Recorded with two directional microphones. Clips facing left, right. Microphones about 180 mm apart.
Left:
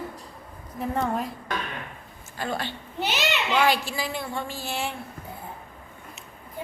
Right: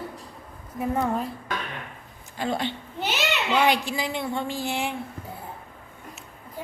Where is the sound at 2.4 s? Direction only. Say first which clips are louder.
Right 3 dB; 20° right (ahead or behind).